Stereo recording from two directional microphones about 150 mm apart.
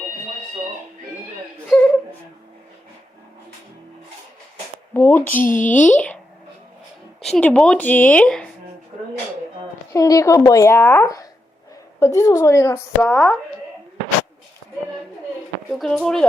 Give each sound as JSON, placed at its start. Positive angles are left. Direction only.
{"t": 4.9, "sound": "speech", "side_deg": 15}
{"t": 7.2, "sound": "speech", "side_deg": 5}
{"t": 8.9, "sound": "a sound", "side_deg": -45}
{"t": 9.9, "sound": "a woman's voice", "side_deg": 20}
{"t": 15.7, "sound": "speech", "side_deg": 0}